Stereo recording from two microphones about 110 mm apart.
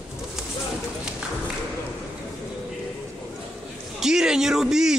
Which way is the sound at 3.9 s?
5° right (ahead or behind).